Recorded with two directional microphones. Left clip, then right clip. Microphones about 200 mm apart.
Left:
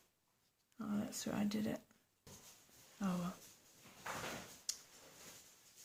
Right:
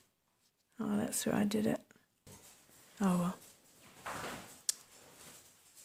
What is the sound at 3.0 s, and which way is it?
Speech, 50° right (ahead or behind).